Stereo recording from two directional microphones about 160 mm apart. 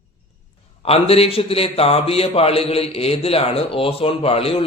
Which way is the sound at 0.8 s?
40° left (ahead or behind).